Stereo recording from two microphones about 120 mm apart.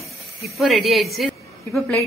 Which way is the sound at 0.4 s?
Centre (ahead or behind).